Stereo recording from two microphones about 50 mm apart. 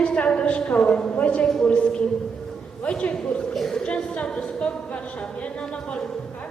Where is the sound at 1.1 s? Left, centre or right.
Left.